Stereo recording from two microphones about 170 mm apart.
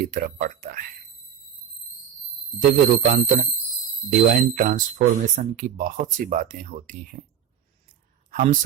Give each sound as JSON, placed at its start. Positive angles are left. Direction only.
{"t": 0.0, "sound": "speech", "side_deg": -55}
{"t": 2.6, "sound": "speech", "side_deg": -55}
{"t": 4.4, "sound": "speech", "side_deg": -55}
{"t": 8.3, "sound": "a sound", "side_deg": -50}